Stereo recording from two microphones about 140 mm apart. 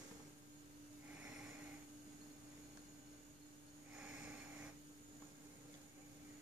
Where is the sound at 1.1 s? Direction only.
10° right (ahead or behind).